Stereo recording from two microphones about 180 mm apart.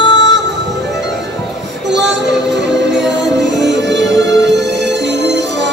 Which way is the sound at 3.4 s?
75° right (ahead or behind).